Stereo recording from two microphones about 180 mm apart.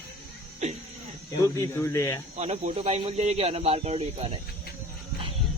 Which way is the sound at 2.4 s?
40° right (ahead or behind).